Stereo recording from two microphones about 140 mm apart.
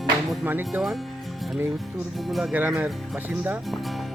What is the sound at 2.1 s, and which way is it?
Speech, centre (ahead or behind).